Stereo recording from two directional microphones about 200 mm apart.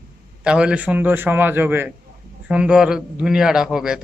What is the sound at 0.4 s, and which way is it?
A man's voice, 5° right (ahead or behind).